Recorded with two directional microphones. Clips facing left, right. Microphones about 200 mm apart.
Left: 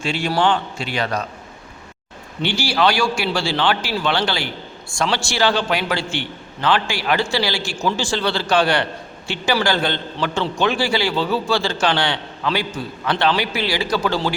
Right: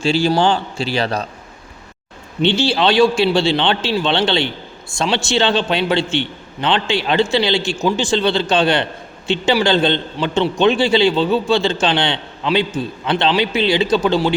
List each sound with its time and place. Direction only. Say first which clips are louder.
0.0 s a man's voice: right 4 dB; 30° right (ahead or behind)
2.4 s a man's voice: right 4 dB; 20° right (ahead or behind)